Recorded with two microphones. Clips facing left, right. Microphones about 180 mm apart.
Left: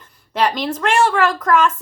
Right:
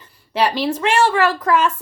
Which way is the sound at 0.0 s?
10° right (ahead or behind).